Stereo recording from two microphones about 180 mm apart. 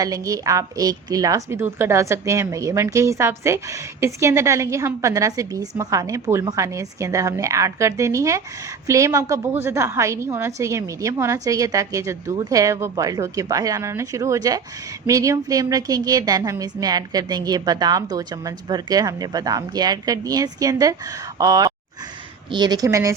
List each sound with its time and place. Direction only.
0.0 s a woman's voice: 20° right (ahead or behind)